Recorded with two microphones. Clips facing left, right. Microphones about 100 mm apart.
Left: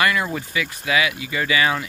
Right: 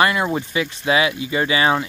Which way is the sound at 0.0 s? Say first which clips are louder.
Right 3 dB; 25° right (ahead or behind).